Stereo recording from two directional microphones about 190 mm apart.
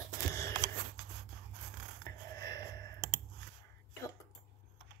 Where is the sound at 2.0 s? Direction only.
15° left (ahead or behind).